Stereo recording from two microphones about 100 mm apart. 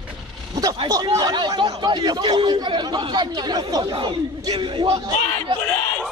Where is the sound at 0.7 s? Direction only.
45° right (ahead or behind).